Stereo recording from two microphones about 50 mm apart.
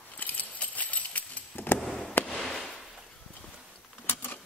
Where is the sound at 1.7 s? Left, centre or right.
Centre.